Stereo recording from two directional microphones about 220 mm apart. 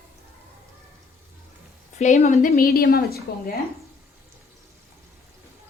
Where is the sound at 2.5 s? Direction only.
45° left (ahead or behind).